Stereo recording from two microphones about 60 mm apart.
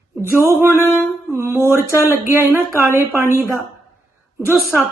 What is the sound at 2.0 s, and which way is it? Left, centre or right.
Speech, right.